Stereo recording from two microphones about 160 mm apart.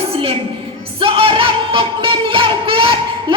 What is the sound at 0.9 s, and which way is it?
Music, 35° right (ahead or behind).